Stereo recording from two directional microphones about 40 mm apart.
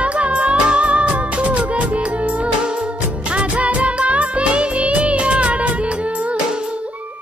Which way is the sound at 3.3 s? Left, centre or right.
Right.